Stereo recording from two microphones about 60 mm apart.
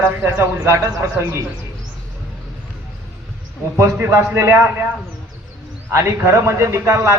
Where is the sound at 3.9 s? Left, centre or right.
Right.